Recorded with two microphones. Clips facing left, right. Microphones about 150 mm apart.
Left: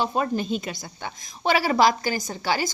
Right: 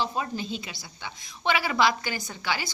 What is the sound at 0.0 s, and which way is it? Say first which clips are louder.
A woman's voice: left 5 dB; 55° left (ahead or behind).